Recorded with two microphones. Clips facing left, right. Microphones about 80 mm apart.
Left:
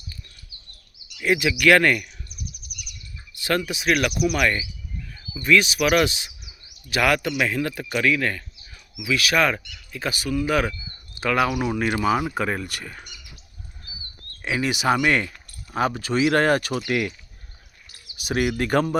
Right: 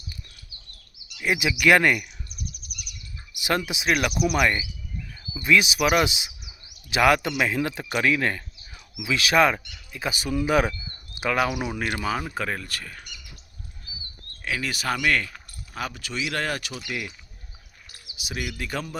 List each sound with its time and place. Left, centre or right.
1.2 s speech: centre
3.3 s a sound: centre
3.7 s speech: centre
11.3 s speech: centre
14.4 s speech: left
15.7 s speech: left
18.2 s speech: left